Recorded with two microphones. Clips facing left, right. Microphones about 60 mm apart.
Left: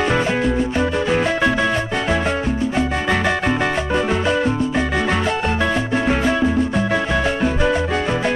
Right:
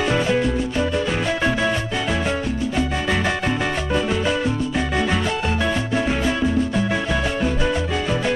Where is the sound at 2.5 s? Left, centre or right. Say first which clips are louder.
Left 3 dB; left.